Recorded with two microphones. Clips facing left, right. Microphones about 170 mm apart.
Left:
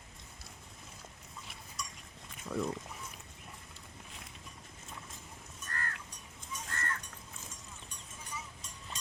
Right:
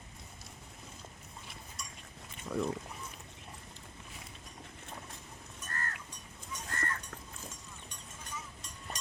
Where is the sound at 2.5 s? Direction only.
5° right (ahead or behind).